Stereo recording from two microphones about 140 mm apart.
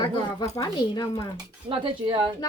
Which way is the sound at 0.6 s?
30° left (ahead or behind).